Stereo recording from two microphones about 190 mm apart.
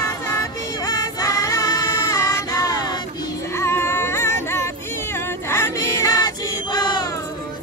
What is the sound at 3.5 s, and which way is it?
Music, 15° left (ahead or behind).